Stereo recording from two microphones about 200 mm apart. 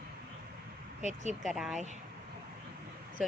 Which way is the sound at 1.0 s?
35° right (ahead or behind).